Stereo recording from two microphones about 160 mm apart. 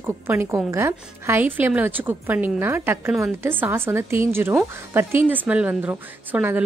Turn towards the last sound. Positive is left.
turn(degrees=-10)  # may be behind; listen again after turning